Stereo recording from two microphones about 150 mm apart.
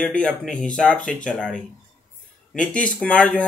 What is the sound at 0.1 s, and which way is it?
Speech, 5° left (ahead or behind).